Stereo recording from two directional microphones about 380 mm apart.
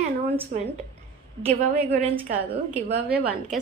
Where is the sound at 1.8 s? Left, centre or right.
Centre.